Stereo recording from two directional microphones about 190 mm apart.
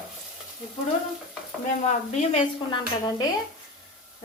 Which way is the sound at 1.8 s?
40° left (ahead or behind).